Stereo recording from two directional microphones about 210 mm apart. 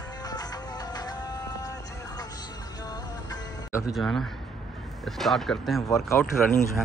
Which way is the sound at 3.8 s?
Centre (ahead or behind).